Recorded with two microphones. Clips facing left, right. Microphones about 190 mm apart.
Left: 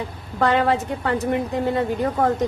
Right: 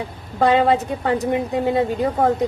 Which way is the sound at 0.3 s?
15° right (ahead or behind).